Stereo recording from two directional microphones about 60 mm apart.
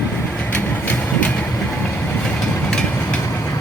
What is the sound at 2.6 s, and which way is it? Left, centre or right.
Vehicle, centre.